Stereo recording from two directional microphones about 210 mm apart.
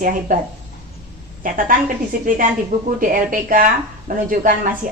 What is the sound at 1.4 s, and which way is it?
A woman's voice, 40° right (ahead or behind).